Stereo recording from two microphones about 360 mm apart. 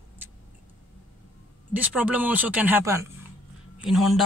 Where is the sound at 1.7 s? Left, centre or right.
Centre.